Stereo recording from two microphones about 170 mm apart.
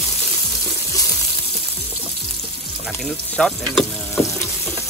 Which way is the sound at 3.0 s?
5° left (ahead or behind).